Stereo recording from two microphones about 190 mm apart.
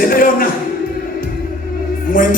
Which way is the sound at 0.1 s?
50° left (ahead or behind).